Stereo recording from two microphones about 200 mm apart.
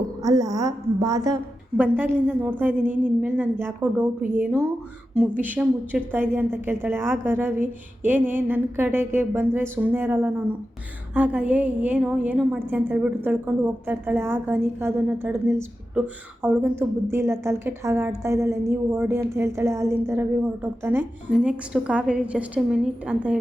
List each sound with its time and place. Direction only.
0.2 s a woman's voice: 15° right (ahead or behind)